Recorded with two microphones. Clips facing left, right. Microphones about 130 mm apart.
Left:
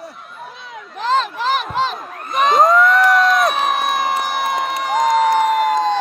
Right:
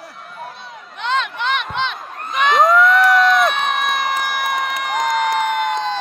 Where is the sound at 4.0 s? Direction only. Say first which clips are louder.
Left 2 dB; 25° left (ahead or behind).